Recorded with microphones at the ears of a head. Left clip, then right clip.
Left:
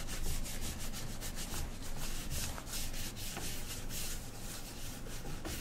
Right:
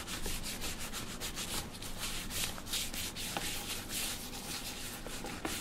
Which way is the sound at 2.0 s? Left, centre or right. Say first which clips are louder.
Right 6 dB; right.